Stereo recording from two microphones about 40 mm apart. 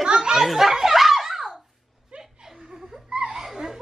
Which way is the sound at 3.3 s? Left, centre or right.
Centre.